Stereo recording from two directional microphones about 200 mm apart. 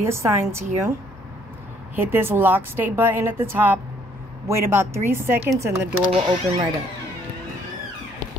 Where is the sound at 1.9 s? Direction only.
10° right (ahead or behind).